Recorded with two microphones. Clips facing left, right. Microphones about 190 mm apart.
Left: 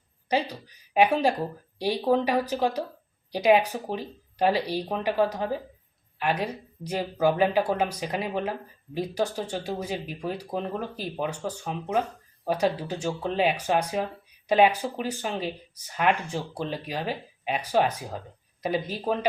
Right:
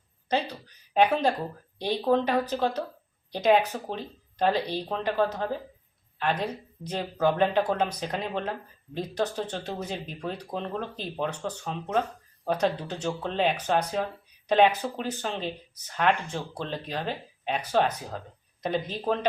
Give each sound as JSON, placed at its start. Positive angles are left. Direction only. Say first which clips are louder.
{"t": 0.3, "sound": "speech", "louder": "left 1 dB", "side_deg": 10}